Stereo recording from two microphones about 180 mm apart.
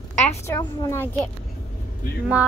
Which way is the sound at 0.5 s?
15° left (ahead or behind).